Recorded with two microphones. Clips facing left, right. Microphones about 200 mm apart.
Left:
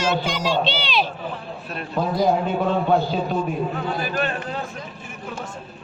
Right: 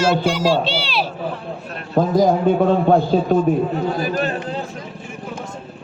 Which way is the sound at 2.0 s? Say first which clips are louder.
Right 5 dB; 45° right (ahead or behind).